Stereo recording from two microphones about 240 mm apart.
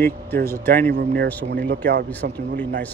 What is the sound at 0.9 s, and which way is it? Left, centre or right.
Speech, right.